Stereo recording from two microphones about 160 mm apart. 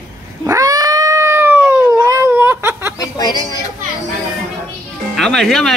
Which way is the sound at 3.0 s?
25° left (ahead or behind).